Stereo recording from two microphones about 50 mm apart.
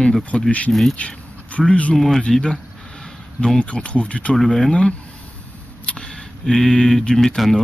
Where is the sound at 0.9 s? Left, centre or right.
Left.